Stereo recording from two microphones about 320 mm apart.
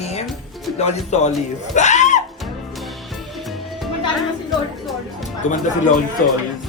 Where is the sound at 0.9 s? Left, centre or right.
Left.